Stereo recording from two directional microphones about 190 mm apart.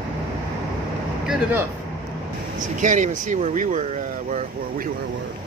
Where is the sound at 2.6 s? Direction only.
40° right (ahead or behind).